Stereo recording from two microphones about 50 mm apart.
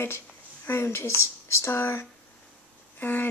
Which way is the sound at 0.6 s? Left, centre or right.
Left.